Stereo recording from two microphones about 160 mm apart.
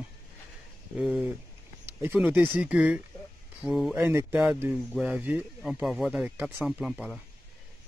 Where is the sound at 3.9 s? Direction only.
15° right (ahead or behind).